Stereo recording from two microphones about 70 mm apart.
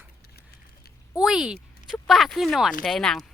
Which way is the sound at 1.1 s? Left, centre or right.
Centre.